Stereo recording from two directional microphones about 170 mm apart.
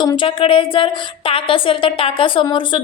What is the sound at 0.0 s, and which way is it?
A woman's voice, 25° left (ahead or behind).